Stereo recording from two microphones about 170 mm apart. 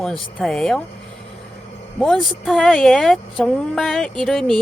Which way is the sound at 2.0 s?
Centre (ahead or behind).